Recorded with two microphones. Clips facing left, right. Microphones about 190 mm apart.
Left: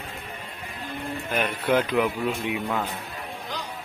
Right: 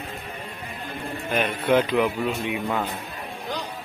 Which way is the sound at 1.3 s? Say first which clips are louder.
Right 3 dB; 10° left (ahead or behind).